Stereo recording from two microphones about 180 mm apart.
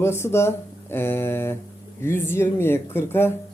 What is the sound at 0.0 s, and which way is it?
Speech, 15° left (ahead or behind).